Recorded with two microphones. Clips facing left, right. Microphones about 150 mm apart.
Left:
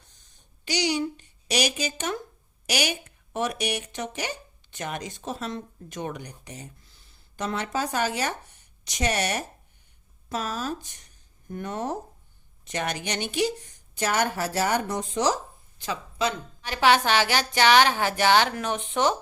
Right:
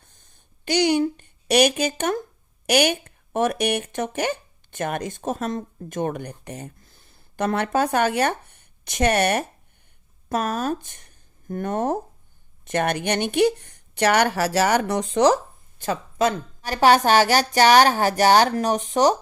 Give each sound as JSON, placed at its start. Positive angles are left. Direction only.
{"t": 0.1, "sound": "a sound", "side_deg": -55}
{"t": 2.6, "sound": "speech", "side_deg": -55}
{"t": 15.8, "sound": "a woman's voice", "side_deg": -50}